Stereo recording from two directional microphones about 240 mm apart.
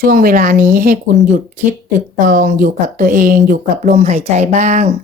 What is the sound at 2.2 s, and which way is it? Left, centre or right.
Speech, right.